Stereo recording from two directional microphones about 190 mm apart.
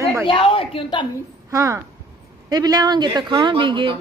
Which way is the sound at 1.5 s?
15° right (ahead or behind).